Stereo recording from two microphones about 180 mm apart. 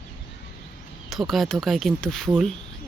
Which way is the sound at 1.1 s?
Centre (ahead or behind).